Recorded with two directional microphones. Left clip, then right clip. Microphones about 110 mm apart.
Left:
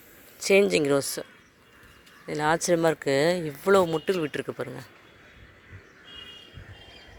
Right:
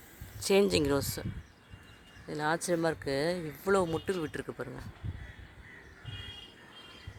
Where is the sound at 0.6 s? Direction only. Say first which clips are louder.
Left 6 dB; centre (ahead or behind); by 1.3 s 15° left (ahead or behind).